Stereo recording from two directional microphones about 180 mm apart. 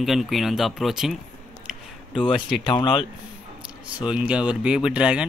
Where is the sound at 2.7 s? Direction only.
25° left (ahead or behind).